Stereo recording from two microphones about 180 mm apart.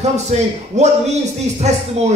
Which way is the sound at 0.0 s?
40° right (ahead or behind).